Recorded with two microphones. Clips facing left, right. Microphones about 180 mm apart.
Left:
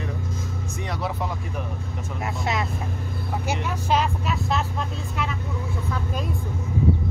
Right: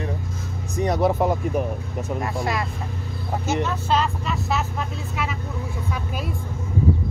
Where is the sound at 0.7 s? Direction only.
45° right (ahead or behind).